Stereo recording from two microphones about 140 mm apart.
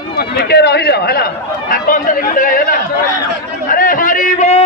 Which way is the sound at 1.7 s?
80° left.